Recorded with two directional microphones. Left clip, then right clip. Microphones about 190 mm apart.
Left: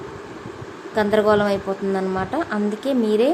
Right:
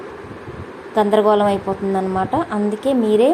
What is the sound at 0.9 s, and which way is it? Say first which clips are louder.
A woman's voice: right 3 dB; centre (ahead or behind).